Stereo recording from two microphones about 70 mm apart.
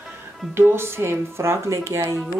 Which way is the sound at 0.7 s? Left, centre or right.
Right.